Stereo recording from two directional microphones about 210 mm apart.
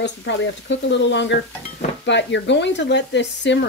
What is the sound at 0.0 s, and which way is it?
Speech, 55° left (ahead or behind).